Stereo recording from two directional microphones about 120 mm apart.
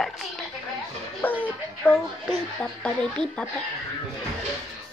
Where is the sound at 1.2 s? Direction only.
15° left (ahead or behind).